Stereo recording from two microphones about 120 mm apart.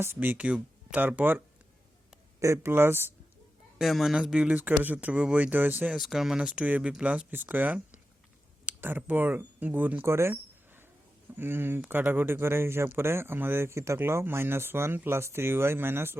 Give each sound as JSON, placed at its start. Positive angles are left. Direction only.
{"t": 0.0, "sound": "speech", "side_deg": -20}
{"t": 2.4, "sound": "speech", "side_deg": -20}
{"t": 3.8, "sound": "speech", "side_deg": -5}
{"t": 6.0, "sound": "speech", "side_deg": 0}
{"t": 11.3, "sound": "speech", "side_deg": -20}